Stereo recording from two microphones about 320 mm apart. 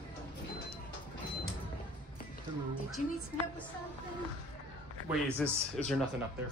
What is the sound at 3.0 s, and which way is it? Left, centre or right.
Music, left.